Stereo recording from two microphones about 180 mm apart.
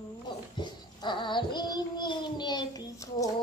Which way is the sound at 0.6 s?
25° left (ahead or behind).